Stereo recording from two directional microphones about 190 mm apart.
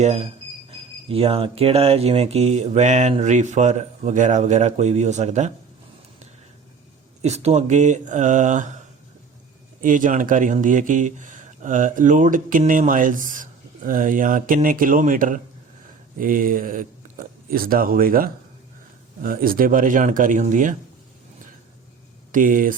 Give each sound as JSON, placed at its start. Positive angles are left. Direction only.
{"t": 0.0, "sound": "speech", "side_deg": -35}
{"t": 7.2, "sound": "speech", "side_deg": -35}
{"t": 9.8, "sound": "speech", "side_deg": -45}
{"t": 22.3, "sound": "speech", "side_deg": -45}